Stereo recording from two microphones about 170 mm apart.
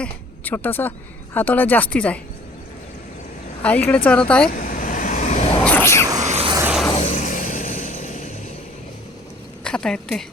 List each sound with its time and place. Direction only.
0.0 s speech: 10° left (ahead or behind)
3.6 s speech: 10° left (ahead or behind)
4.4 s vehicle: 55° left (ahead or behind)
5.6 s speech: 15° left (ahead or behind)
6.1 s a sound: 40° right (ahead or behind)
6.9 s vehicle: 45° left (ahead or behind)
9.6 s a woman's voice: 5° left (ahead or behind)